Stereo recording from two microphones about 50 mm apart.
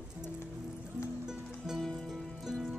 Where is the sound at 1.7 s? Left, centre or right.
Centre.